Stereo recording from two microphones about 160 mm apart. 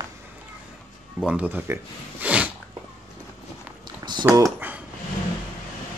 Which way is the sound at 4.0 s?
25° right (ahead or behind).